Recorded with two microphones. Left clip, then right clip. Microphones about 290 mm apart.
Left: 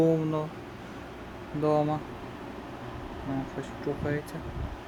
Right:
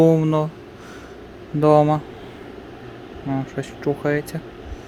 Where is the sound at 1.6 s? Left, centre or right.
Right.